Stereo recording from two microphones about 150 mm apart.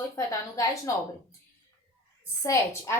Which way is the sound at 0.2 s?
20° left (ahead or behind).